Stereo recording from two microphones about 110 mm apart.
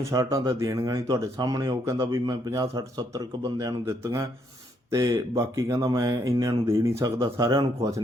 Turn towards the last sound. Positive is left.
turn(degrees=-35)  # may be behind; listen again after turning